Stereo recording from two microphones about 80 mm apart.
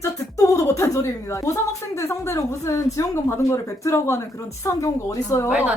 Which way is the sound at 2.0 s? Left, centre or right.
Left.